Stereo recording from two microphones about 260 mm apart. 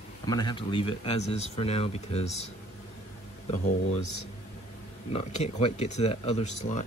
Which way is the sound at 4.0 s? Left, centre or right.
Left.